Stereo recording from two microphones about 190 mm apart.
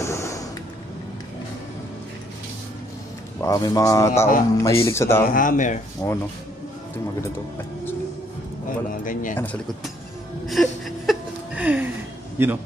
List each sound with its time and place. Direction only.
0.0 s a sound: 15° left (ahead or behind)
3.3 s speech: 15° left (ahead or behind)
5.2 s speech: 45° left (ahead or behind)
6.0 s speech: 15° left (ahead or behind)
8.6 s speech: 45° left (ahead or behind)
10.4 s a sound: centre (ahead or behind)
12.4 s a man's voice: 10° right (ahead or behind)